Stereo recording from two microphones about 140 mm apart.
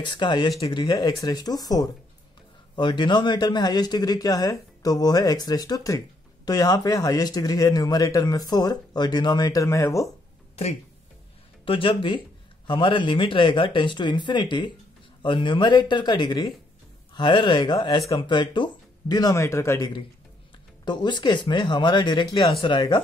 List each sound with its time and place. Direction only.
0.0 s speech: 35° left (ahead or behind)
11.6 s speech: 40° left (ahead or behind); by 19.9 s 20° left (ahead or behind)
20.8 s speech: 30° left (ahead or behind)